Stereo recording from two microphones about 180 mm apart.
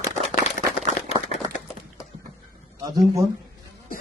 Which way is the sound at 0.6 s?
45° left (ahead or behind).